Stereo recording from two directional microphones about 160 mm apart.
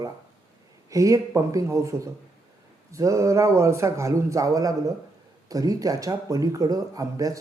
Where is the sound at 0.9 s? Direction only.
20° right (ahead or behind).